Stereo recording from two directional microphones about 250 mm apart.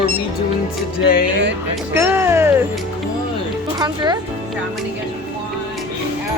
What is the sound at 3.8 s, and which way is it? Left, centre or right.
Speech, centre.